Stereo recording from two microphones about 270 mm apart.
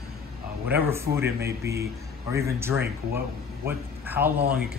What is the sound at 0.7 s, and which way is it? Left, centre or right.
Speech, centre.